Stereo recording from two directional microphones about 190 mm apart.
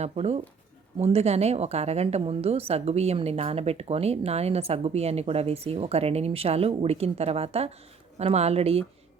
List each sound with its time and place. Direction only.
0.0 s a woman's voice: 35° right (ahead or behind)